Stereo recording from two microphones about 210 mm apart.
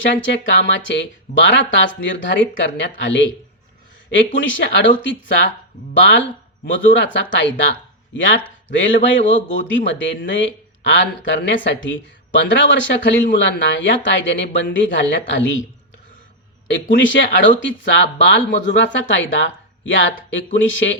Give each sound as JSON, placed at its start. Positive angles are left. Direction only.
{"t": 0.3, "sound": "a man's voice", "side_deg": 60}
{"t": 16.9, "sound": "a man's voice", "side_deg": 60}